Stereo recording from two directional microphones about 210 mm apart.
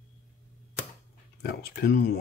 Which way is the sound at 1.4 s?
50° left (ahead or behind).